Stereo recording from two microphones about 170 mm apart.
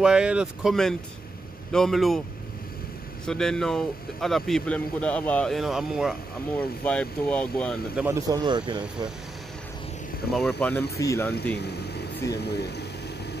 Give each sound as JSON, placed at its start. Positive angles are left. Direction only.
{"t": 0.0, "sound": "speech", "side_deg": -5}
{"t": 3.3, "sound": "speech", "side_deg": 5}
{"t": 6.8, "sound": "speech", "side_deg": 10}
{"t": 8.0, "sound": "speech", "side_deg": -20}
{"t": 10.3, "sound": "speech", "side_deg": 5}
{"t": 11.0, "sound": "speech", "side_deg": 15}
{"t": 11.5, "sound": "speech", "side_deg": 75}